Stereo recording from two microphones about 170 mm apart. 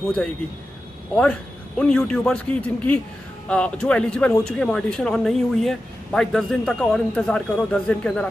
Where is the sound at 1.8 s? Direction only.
5° left (ahead or behind).